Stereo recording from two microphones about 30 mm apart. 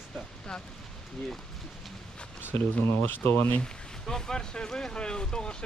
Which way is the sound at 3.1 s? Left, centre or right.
Left.